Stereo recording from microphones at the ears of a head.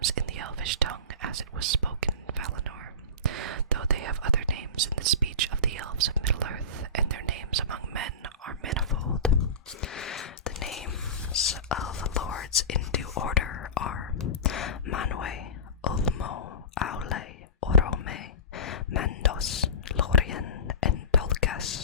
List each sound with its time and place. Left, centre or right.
0.0 s whispering: right
9.3 s whispering: left